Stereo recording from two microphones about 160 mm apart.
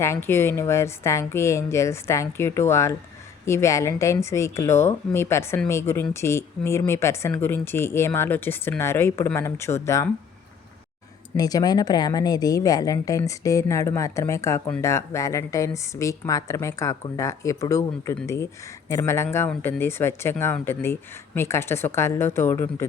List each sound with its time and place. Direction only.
0.0 s speech: 15° left (ahead or behind)
11.3 s speech: 25° left (ahead or behind)